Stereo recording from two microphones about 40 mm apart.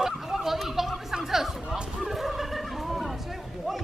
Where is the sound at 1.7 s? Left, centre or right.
Right.